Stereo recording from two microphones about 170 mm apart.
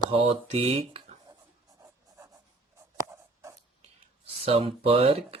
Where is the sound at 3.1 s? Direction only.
15° right (ahead or behind).